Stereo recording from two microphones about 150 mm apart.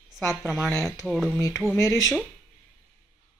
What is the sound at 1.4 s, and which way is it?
Speech, 25° left (ahead or behind).